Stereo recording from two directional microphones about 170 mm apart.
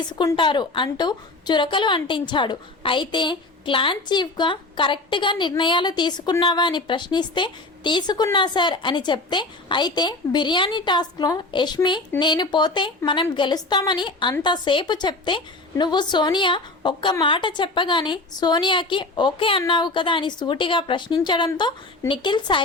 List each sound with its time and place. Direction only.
0.1 s a woman's voice: 25° left (ahead or behind)